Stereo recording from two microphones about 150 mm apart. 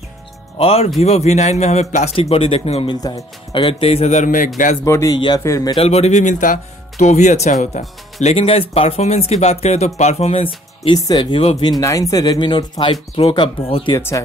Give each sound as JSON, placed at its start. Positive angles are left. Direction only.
{"t": 0.6, "sound": "speech", "side_deg": 40}
{"t": 4.8, "sound": "speech", "side_deg": 20}
{"t": 5.8, "sound": "speech", "side_deg": 45}
{"t": 11.0, "sound": "speech", "side_deg": 25}
{"t": 11.8, "sound": "speech", "side_deg": 20}
{"t": 13.9, "sound": "speech", "side_deg": 20}